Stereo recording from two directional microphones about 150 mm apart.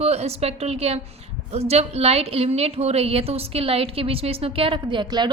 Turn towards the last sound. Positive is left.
turn(degrees=-30)  # may be behind; listen again after turning